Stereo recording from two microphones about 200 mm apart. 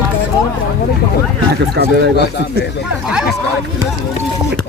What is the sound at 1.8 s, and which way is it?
Speech, 60° right (ahead or behind).